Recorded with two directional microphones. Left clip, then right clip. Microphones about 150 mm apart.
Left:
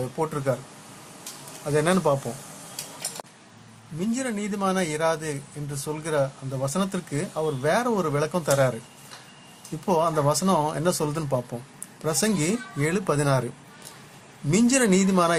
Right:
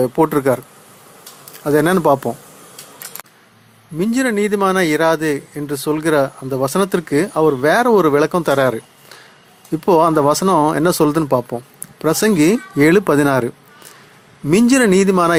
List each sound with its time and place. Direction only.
0.2 s speech: 65° right (ahead or behind)
1.6 s speech: 55° right (ahead or behind)
4.0 s speech: 55° right (ahead or behind)
9.8 s speech: 55° right (ahead or behind)
14.5 s speech: 50° right (ahead or behind)